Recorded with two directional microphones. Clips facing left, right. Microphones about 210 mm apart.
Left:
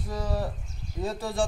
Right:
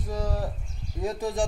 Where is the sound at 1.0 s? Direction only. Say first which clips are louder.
Right 3 dB; 15° right (ahead or behind).